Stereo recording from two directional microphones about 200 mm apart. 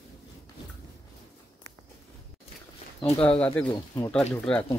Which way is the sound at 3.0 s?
5° left (ahead or behind).